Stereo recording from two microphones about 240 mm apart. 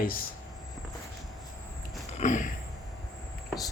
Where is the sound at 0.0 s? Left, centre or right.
Left.